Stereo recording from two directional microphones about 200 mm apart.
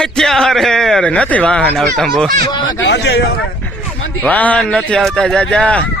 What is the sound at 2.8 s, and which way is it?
Speech, 60° left (ahead or behind).